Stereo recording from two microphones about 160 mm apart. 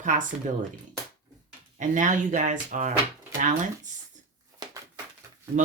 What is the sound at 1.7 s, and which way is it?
Speech, 50° right (ahead or behind).